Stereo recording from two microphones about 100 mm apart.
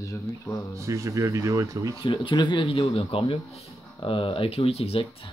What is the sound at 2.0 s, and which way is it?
Speech, 55° left (ahead or behind).